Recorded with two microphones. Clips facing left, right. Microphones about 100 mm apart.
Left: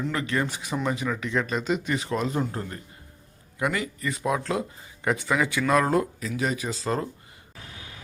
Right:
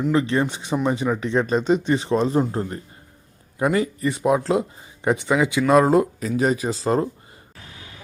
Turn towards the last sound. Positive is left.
turn(degrees=-30)  # may be behind; listen again after turning